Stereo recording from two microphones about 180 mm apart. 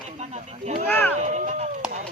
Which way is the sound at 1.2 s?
40° right (ahead or behind).